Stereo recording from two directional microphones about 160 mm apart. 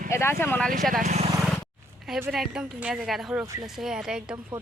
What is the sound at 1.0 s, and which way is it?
Speech, 45° right (ahead or behind).